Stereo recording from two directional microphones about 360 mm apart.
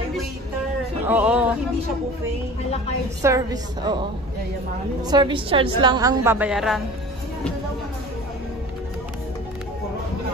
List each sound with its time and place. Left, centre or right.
1.0 s a sound: centre
3.2 s a woman's voice: centre
5.0 s a woman's voice: centre